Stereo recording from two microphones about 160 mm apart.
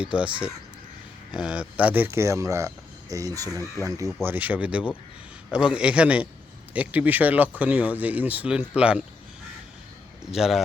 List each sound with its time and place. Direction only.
0.0 s speech: 5° right (ahead or behind)
1.3 s speech: 5° right (ahead or behind); by 3.5 s 20° right (ahead or behind)
3.5 s speech: 15° left (ahead or behind)
3.8 s speech: 20° right (ahead or behind)
10.3 s speech: centre (ahead or behind)